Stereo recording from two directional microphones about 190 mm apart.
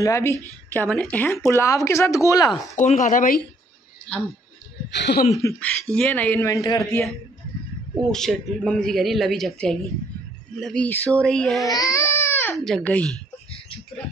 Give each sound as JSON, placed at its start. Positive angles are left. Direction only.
{"t": 0.0, "sound": "speech", "side_deg": 15}
{"t": 2.7, "sound": "speech", "side_deg": 40}
{"t": 4.1, "sound": "a man's voice", "side_deg": 5}
{"t": 4.9, "sound": "speech", "side_deg": 65}
{"t": 5.3, "sound": "speech", "side_deg": 10}
{"t": 8.1, "sound": "a man's voice", "side_deg": 5}
{"t": 11.6, "sound": "baby cry", "side_deg": 20}
{"t": 12.5, "sound": "a man's voice", "side_deg": 0}